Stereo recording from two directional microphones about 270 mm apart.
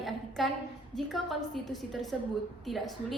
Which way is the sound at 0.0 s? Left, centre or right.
Centre.